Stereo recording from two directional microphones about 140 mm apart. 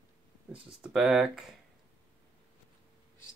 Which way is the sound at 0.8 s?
5° right (ahead or behind).